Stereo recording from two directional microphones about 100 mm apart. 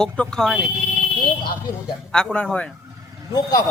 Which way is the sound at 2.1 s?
5° left (ahead or behind).